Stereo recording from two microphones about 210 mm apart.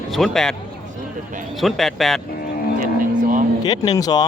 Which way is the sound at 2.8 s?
40° right (ahead or behind).